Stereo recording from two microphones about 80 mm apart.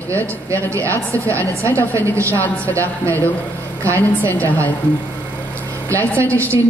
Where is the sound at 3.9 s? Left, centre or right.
Left.